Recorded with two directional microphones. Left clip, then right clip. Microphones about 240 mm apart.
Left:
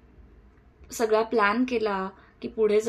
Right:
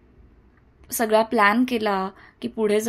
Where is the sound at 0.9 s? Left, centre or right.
Right.